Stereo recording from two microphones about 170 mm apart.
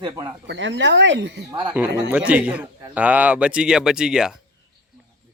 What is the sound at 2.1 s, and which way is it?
A man's voice, 10° right (ahead or behind).